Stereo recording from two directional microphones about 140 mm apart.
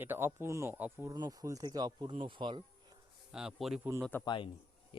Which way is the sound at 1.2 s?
25° right (ahead or behind).